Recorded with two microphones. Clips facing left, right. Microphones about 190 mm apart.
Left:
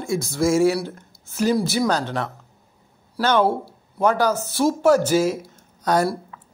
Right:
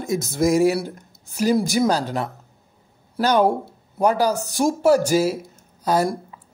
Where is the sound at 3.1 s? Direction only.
15° right (ahead or behind).